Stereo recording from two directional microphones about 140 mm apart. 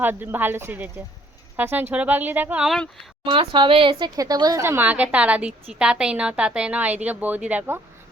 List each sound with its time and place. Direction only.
0.0 s a woman's voice: 15° right (ahead or behind)
3.2 s speech: 35° right (ahead or behind)
4.2 s a woman's voice: 25° right (ahead or behind); by 7.8 s 10° right (ahead or behind)